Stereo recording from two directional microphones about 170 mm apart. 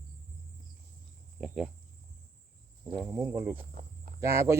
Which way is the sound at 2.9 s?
10° right (ahead or behind).